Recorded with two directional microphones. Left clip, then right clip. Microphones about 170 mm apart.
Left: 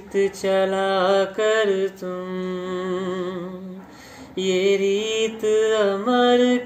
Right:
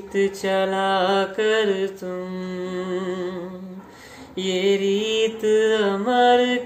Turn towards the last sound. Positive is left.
turn(degrees=-15)  # may be behind; listen again after turning